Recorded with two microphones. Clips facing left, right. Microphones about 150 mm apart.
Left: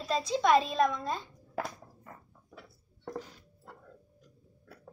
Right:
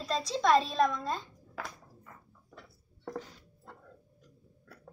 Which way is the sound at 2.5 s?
10° left (ahead or behind).